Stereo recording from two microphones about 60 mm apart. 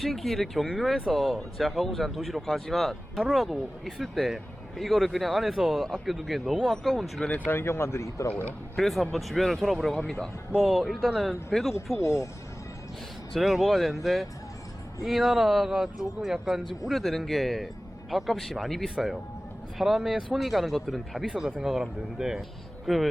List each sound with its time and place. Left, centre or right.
0.0 s a man's voice: centre
7.3 s speech: left
7.5 s speech: left
8.7 s a man's voice: centre
11.9 s speech: left
13.3 s a man's voice: centre
21.2 s speech: centre
22.9 s a man's voice: centre